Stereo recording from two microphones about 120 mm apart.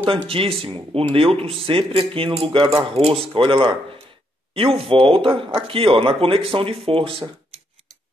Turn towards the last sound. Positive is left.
turn(degrees=-50)  # may be behind; listen again after turning